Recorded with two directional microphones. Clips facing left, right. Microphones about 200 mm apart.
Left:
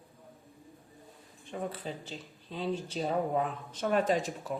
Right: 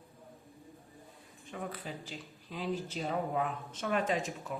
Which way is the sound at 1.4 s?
30° left (ahead or behind).